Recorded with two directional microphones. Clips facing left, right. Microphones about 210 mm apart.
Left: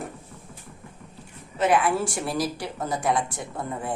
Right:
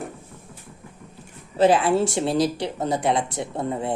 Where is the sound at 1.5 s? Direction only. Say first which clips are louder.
Right 4 dB; 30° right (ahead or behind).